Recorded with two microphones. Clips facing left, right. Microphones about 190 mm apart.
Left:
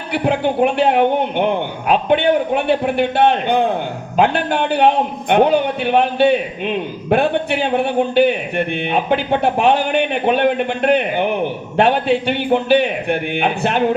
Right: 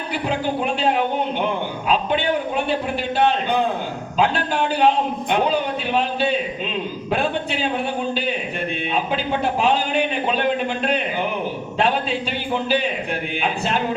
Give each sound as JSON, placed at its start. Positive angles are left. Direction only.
{"t": 0.1, "sound": "a man's voice", "side_deg": 60}